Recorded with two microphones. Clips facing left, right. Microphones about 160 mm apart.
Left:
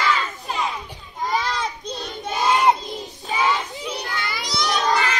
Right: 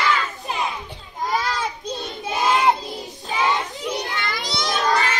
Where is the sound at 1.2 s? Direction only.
Centre (ahead or behind).